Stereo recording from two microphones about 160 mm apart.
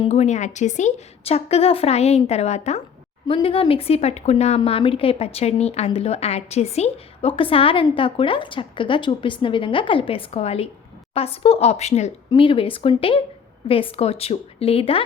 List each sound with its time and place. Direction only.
0.0 s speech: 45° left (ahead or behind)
12.3 s speech: 30° left (ahead or behind)